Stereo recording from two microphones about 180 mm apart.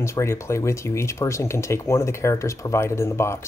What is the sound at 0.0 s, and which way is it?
Speech, 15° left (ahead or behind).